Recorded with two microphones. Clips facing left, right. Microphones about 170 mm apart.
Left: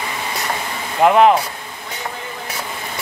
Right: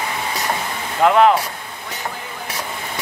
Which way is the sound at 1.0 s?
20° left (ahead or behind).